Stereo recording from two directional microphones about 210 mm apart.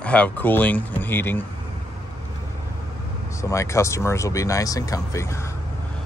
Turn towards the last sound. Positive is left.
turn(degrees=15)  # may be behind; listen again after turning